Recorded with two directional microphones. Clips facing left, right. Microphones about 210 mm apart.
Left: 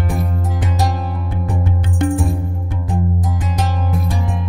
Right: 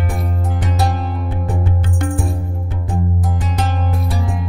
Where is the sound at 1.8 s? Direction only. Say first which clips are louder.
Left 4 dB; 25° left (ahead or behind).